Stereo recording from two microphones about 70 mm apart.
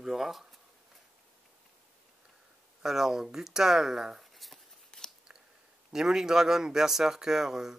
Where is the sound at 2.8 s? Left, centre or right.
Centre.